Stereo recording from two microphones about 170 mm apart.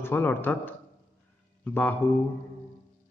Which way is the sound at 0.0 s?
10° left (ahead or behind).